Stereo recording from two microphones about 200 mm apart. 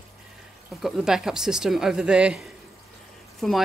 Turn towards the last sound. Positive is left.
turn(degrees=0)  # may be behind; listen again after turning